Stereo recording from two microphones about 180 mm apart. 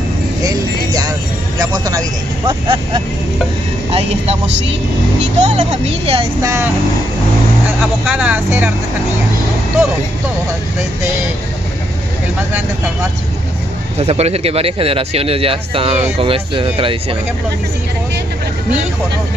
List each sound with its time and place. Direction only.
1.6 s speech: 20° right (ahead or behind)
5.4 s speech: 35° right (ahead or behind)
6.4 s speech: 15° right (ahead or behind)
8.0 s speech: 5° right (ahead or behind)
13.9 s speech: 35° right (ahead or behind)